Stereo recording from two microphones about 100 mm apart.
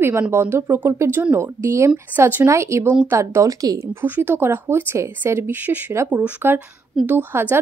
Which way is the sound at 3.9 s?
20° right (ahead or behind).